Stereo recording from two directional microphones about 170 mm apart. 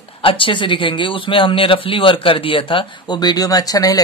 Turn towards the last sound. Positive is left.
turn(degrees=20)  # may be behind; listen again after turning